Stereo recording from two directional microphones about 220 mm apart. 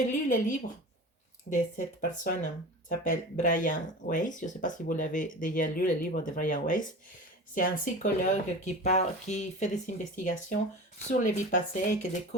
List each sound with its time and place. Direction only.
0.0 s speech: 35° left (ahead or behind)
1.5 s speech: 35° left (ahead or behind)